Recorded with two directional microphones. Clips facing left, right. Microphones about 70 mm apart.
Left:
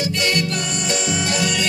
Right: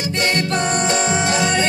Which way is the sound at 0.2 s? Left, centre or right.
Right.